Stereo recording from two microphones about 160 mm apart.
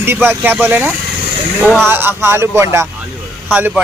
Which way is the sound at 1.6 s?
5° left (ahead or behind).